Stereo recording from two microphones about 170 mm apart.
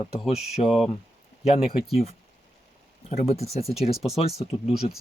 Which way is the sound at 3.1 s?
40° left (ahead or behind).